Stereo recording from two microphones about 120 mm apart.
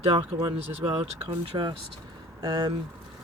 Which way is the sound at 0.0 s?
50° right (ahead or behind).